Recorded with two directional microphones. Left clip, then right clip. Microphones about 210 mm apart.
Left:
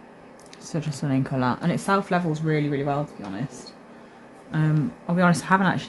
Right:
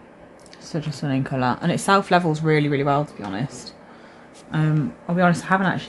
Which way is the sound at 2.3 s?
25° right (ahead or behind).